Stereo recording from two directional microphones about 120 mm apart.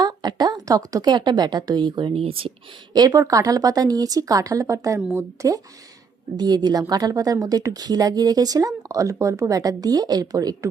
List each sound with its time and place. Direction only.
0.0 s speech: 35° right (ahead or behind); by 2.5 s 50° right (ahead or behind)
2.9 s speech: 30° right (ahead or behind)